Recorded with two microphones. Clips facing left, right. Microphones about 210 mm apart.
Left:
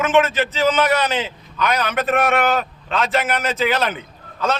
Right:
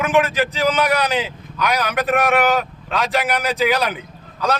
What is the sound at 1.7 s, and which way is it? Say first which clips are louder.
Speech: right 1 dB; 10° right (ahead or behind).